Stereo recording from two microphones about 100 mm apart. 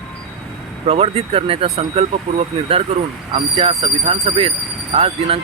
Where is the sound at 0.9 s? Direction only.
85° right.